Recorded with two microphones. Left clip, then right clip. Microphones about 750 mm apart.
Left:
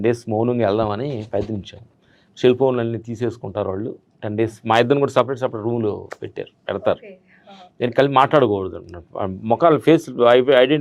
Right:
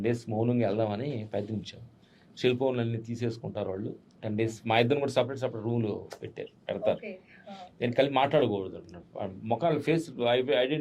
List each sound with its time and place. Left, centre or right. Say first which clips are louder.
0.0 s speech: left 10 dB; left